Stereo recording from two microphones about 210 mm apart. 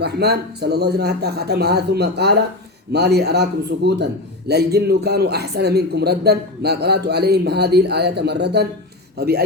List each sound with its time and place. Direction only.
0.0 s a man's voice: 50° right (ahead or behind)